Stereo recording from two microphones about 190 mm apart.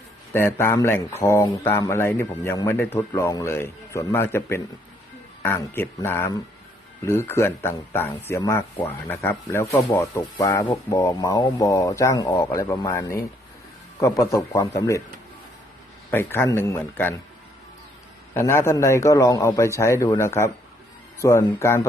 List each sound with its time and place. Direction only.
0.3 s speech: 15° left (ahead or behind)
16.1 s speech: 10° left (ahead or behind)
18.3 s speech: 15° left (ahead or behind)